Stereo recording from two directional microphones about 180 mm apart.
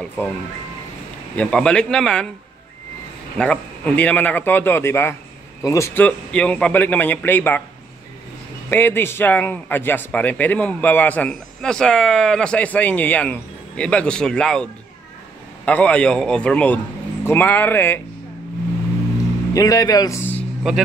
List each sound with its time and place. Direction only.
1.3 s speech: 5° left (ahead or behind)
3.3 s a man's voice: 5° left (ahead or behind)
8.6 s a man's voice: 10° left (ahead or behind)
19.5 s speech: 20° left (ahead or behind)